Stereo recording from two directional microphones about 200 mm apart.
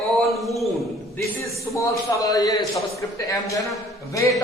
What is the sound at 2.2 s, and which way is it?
A man's voice, 20° left (ahead or behind).